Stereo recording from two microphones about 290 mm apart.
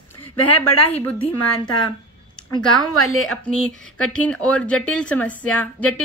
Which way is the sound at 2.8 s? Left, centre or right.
Left.